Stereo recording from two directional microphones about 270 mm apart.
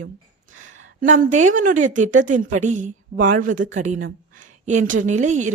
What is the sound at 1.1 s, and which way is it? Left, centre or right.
A woman's voice, right.